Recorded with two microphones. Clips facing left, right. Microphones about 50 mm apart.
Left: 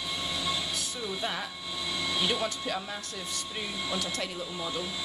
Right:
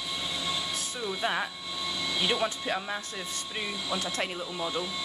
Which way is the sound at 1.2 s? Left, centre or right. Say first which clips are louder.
Right 4 dB; right.